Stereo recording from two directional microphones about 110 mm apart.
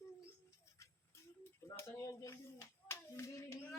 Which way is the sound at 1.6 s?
25° left (ahead or behind).